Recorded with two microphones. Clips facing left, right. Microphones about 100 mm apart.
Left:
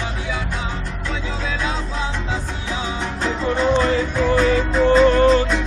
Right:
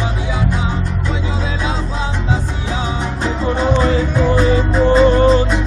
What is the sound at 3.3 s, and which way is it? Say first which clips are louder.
Music: right 1 dB; 15° right (ahead or behind).